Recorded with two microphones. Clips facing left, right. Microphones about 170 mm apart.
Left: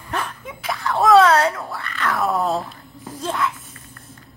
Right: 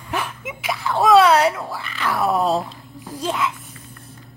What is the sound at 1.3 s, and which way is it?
Speech, 15° right (ahead or behind).